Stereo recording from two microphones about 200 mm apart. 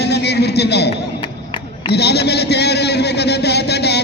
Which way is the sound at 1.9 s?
55° left (ahead or behind).